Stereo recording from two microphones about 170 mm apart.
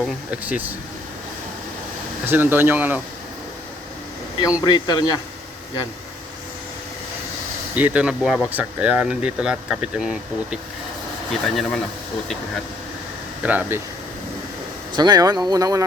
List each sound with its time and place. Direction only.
0.0 s speech: 10° right (ahead or behind)
2.2 s speech: 10° right (ahead or behind)
4.6 s speech: 25° left (ahead or behind)
7.8 s speech: 10° right (ahead or behind)
13.4 s speech: 10° right (ahead or behind)
14.9 s speech: 25° right (ahead or behind)